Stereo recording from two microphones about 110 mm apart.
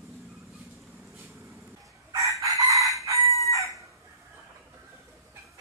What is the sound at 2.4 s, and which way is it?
Chicken, 30° right (ahead or behind).